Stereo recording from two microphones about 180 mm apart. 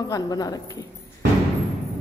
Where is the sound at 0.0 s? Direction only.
20° left (ahead or behind).